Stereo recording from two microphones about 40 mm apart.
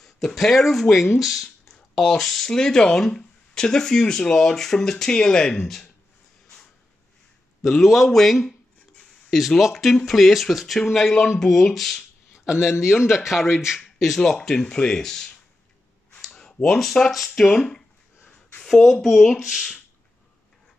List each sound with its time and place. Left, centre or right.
0.0 s speech: centre
2.5 s speech: centre
7.6 s speech: centre
9.6 s speech: centre
12.5 s a man's voice: left
12.8 s speech: centre
16.3 s a sound: centre
16.6 s speech: centre
18.7 s speech: centre
19.4 s speech: centre